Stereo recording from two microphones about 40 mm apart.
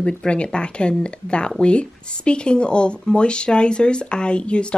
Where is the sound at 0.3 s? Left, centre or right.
Left.